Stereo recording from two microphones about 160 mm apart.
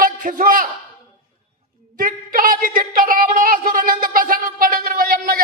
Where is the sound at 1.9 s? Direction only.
60° right (ahead or behind).